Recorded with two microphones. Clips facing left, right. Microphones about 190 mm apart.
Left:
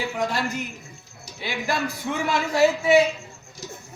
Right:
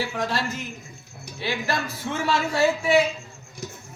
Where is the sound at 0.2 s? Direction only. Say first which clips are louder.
Left 1 dB; 15° left (ahead or behind).